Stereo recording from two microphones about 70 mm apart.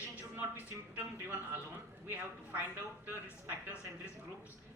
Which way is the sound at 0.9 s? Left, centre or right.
Right.